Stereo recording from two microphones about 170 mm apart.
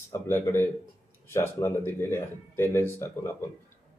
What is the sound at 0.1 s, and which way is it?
Speech, 15° left (ahead or behind).